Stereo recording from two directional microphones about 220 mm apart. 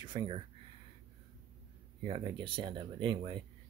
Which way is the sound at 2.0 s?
20° right (ahead or behind).